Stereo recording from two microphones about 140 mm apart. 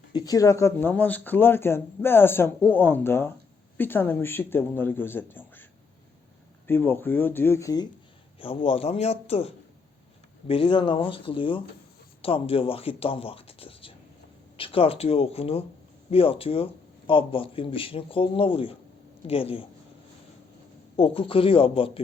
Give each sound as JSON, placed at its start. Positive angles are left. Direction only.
{"t": 0.1, "sound": "speech", "side_deg": 30}
{"t": 6.7, "sound": "speech", "side_deg": 15}
{"t": 8.4, "sound": "a man's voice", "side_deg": 40}
{"t": 20.9, "sound": "speech", "side_deg": 40}